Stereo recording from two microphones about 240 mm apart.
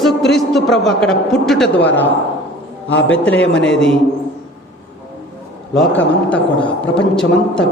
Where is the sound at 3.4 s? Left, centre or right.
Left.